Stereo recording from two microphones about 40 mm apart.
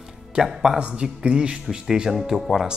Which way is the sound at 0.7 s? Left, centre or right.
Right.